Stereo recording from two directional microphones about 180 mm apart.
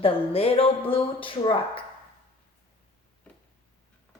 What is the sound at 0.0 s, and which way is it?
Speech, 30° left (ahead or behind).